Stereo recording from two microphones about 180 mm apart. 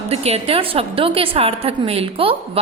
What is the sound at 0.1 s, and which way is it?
A woman's voice, 35° right (ahead or behind).